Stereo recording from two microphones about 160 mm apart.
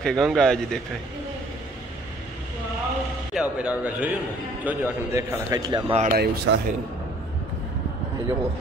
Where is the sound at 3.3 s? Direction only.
10° right (ahead or behind); by 5.9 s 25° right (ahead or behind).